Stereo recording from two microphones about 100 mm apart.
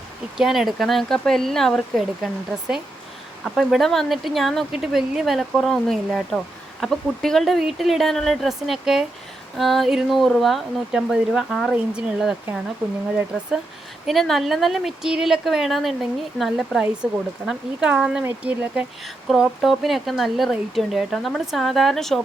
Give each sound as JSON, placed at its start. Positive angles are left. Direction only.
{"t": 0.3, "sound": "speech", "side_deg": -5}
{"t": 3.4, "sound": "speech", "side_deg": 0}
{"t": 14.1, "sound": "speech", "side_deg": 0}
{"t": 19.0, "sound": "speech", "side_deg": 0}